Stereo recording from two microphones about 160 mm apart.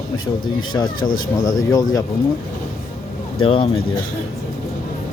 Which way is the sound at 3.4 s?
35° left (ahead or behind).